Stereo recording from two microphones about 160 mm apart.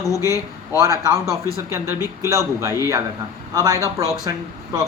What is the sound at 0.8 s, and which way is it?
Speech, 20° right (ahead or behind).